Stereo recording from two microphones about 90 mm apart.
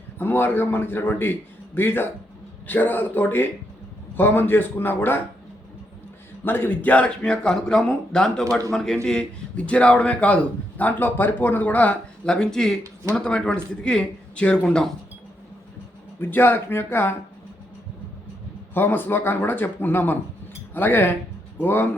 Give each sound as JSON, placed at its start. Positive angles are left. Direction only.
{"t": 0.2, "sound": "a man's voice", "side_deg": 25}
{"t": 6.4, "sound": "a man's voice", "side_deg": 20}
{"t": 16.2, "sound": "a man's voice", "side_deg": 25}
{"t": 18.7, "sound": "a man's voice", "side_deg": 25}